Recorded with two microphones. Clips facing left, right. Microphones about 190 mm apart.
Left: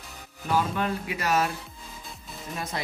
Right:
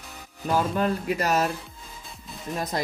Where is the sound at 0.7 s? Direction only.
40° right (ahead or behind).